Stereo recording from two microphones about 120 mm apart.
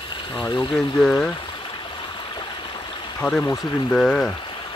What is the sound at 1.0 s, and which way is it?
Speech, 5° left (ahead or behind).